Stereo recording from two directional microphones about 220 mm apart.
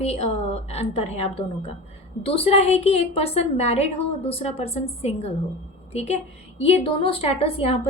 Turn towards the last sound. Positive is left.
turn(degrees=25)  # may be behind; listen again after turning